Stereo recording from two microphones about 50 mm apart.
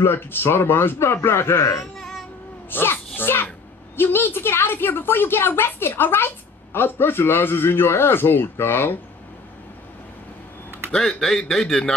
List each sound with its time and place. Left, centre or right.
0.0 s a child's voice: left
2.0 s a sound: centre
2.7 s a child's voice: left
10.9 s a man's voice: centre